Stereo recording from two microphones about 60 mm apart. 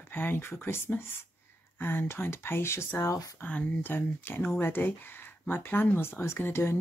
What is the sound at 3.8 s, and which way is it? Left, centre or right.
Speech, left.